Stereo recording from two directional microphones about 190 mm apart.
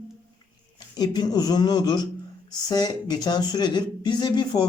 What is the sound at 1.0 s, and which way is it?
A woman's voice, 20° left (ahead or behind).